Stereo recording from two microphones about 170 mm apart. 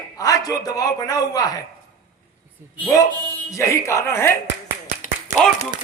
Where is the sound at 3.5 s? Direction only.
15° left (ahead or behind).